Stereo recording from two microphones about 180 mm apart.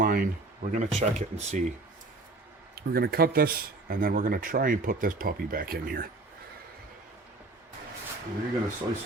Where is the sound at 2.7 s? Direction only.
60° right (ahead or behind).